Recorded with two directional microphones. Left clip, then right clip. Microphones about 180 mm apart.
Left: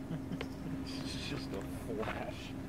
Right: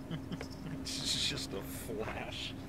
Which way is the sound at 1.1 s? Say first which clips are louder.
Right 12 dB; 5° right (ahead or behind).